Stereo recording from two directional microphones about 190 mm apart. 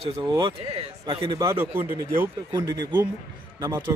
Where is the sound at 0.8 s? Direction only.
30° right (ahead or behind).